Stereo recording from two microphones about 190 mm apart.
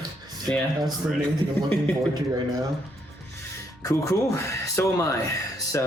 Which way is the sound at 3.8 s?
15° left (ahead or behind).